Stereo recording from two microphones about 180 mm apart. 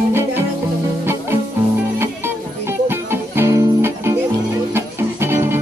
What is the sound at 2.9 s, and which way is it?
Music, 15° right (ahead or behind).